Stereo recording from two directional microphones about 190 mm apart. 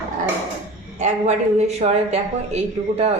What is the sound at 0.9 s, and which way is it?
Speech, 40° right (ahead or behind).